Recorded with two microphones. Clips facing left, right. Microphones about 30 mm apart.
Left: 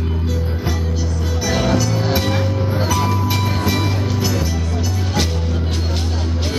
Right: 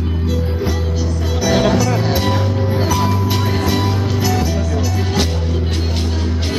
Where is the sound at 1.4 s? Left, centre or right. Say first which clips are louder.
Right 4 dB; centre.